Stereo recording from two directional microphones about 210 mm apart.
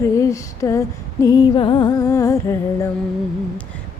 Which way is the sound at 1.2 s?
20° left (ahead or behind).